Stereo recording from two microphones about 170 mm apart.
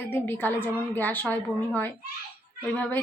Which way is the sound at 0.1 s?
10° left (ahead or behind).